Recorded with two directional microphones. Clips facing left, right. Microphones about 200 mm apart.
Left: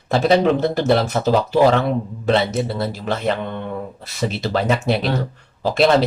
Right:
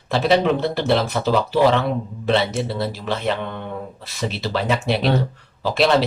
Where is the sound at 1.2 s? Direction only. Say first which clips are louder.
Left 2 dB; 40° left (ahead or behind).